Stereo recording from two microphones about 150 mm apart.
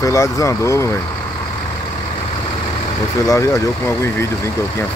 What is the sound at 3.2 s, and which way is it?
Speech, 20° left (ahead or behind).